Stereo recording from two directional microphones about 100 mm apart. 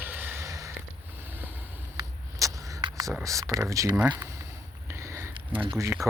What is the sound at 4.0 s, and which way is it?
Speech, 15° right (ahead or behind).